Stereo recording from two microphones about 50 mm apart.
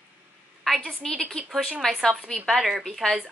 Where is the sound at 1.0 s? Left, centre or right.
Centre.